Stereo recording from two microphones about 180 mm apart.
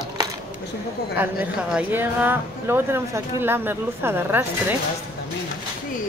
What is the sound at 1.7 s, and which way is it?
Speech, 10° right (ahead or behind).